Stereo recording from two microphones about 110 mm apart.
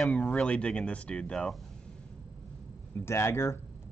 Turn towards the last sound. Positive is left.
turn(degrees=25)  # may be behind; listen again after turning